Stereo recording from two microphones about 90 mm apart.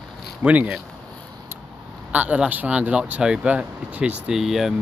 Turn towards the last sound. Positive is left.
turn(degrees=0)  # may be behind; listen again after turning